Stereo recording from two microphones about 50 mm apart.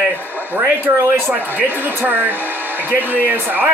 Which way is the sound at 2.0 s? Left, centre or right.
Right.